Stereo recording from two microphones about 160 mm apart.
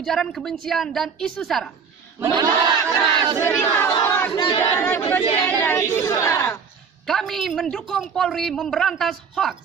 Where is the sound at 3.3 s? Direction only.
15° left (ahead or behind).